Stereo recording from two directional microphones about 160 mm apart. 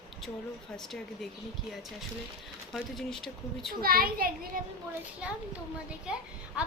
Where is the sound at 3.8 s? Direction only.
65° right (ahead or behind).